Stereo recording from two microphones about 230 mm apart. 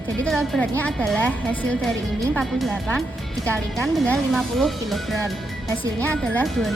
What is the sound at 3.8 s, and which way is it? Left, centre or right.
Speech, centre.